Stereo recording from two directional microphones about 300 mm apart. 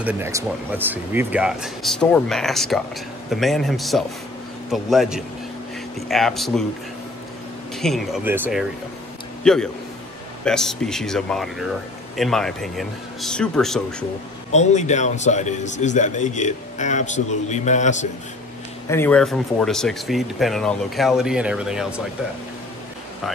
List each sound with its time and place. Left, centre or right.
0.0 s speech: centre
7.7 s a man's voice: centre
14.5 s a man's voice: left
18.9 s speech: centre